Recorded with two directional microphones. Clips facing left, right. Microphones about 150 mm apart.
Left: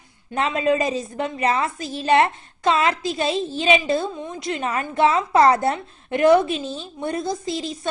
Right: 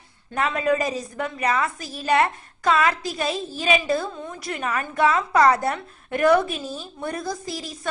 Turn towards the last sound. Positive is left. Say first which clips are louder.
# left 5 dB
turn(degrees=25)  # may be behind; listen again after turning